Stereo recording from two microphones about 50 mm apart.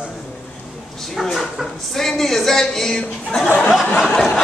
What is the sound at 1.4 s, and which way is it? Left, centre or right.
Speech, centre.